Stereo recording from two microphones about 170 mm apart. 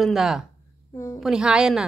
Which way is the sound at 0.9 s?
15° left (ahead or behind).